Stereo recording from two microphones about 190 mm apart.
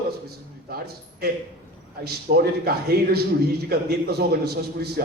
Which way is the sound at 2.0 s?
55° right (ahead or behind).